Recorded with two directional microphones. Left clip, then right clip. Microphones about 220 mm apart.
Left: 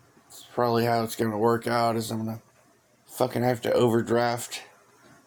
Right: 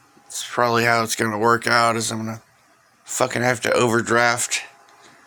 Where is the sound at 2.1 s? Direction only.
30° right (ahead or behind).